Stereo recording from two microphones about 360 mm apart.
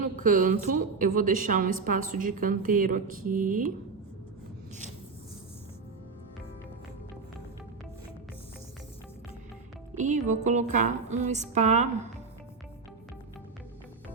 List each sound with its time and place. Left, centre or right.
0.2 s music: right
9.9 s music: centre